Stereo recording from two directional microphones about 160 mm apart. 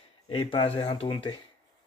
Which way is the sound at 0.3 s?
30° left (ahead or behind).